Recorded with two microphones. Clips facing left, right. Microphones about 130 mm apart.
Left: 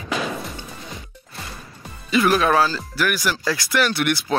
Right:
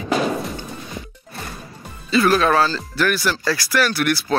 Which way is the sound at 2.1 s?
15° left (ahead or behind).